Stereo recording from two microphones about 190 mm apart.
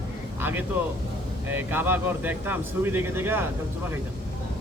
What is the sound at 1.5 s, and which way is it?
Speech, 10° right (ahead or behind).